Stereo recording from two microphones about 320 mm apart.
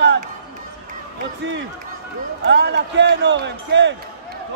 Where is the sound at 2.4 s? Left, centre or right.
Right.